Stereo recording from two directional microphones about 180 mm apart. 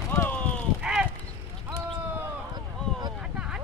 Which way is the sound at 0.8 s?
5° right (ahead or behind).